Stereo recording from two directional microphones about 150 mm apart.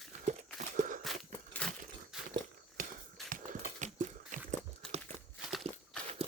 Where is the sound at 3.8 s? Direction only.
55° right (ahead or behind).